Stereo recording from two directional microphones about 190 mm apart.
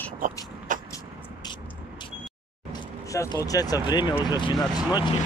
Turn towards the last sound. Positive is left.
turn(degrees=20)  # may be behind; listen again after turning